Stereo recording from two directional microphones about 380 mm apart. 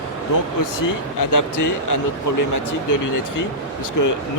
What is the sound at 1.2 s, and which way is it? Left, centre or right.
Speech, left.